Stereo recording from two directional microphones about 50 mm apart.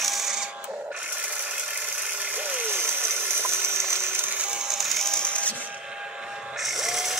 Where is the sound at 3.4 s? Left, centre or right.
Right.